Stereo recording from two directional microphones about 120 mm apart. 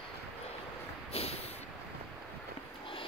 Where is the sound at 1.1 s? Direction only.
55° left (ahead or behind).